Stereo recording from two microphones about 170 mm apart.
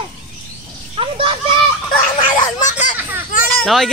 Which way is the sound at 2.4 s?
45° left (ahead or behind).